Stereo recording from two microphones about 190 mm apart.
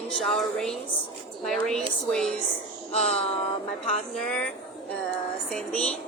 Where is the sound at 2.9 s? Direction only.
35° left (ahead or behind).